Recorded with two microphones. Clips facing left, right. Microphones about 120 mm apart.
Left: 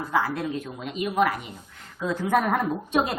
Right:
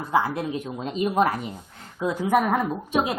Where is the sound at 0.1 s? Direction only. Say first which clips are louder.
Right 3 dB; 20° right (ahead or behind).